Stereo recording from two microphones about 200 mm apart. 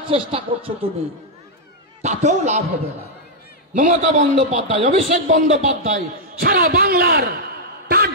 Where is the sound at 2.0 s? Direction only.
35° right (ahead or behind).